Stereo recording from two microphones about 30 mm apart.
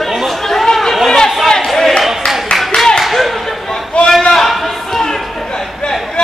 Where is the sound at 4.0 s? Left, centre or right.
Left.